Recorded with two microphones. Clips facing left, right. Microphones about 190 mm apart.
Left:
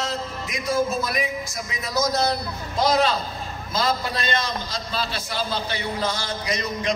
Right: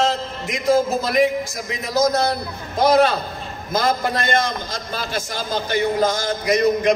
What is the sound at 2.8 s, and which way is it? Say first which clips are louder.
A man's voice: right 5 dB; 55° right (ahead or behind).